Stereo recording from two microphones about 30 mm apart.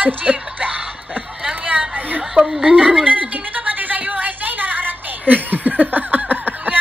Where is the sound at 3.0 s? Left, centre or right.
Right.